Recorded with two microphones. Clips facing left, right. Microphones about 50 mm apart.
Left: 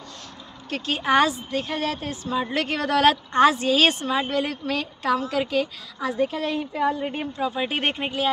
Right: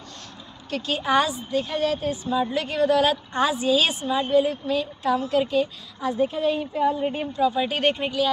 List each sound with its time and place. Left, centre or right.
0.7 s a woman's voice: left
7.2 s speech: left